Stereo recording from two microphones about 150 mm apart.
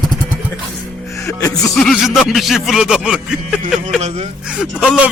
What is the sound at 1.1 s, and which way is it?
Music, 20° left (ahead or behind).